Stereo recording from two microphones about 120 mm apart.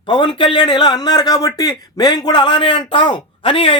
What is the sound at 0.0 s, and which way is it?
A man's voice, 45° left (ahead or behind).